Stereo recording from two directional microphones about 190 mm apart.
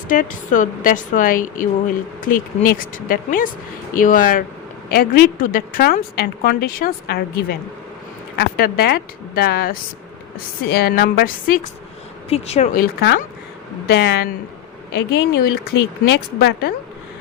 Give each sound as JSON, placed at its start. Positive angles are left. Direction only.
{"t": 0.1, "sound": "speech", "side_deg": 45}
{"t": 8.4, "sound": "speech", "side_deg": 55}
{"t": 12.3, "sound": "speech", "side_deg": 35}
{"t": 12.7, "sound": "speech", "side_deg": 55}